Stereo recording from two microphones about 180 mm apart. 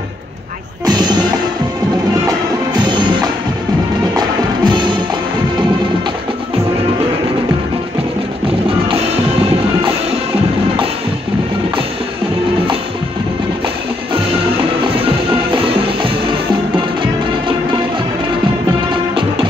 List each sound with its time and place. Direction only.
0.8 s music: 25° right (ahead or behind)
2.7 s music: 25° right (ahead or behind)
4.6 s music: 25° right (ahead or behind)